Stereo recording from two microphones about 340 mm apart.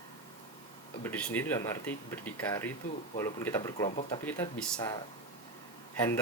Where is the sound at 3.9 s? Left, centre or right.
Left.